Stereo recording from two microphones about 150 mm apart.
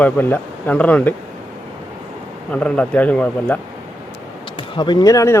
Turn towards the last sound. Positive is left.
turn(degrees=20)  # may be behind; listen again after turning